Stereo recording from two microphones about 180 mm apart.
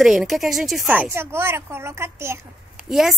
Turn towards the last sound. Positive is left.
turn(degrees=0)  # may be behind; listen again after turning